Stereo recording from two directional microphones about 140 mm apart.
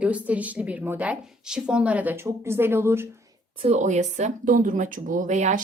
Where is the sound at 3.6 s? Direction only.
55° right (ahead or behind).